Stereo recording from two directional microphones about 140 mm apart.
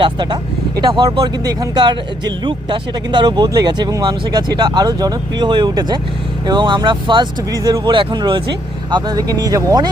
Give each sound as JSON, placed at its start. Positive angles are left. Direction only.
{"t": 0.0, "sound": "speech", "side_deg": -30}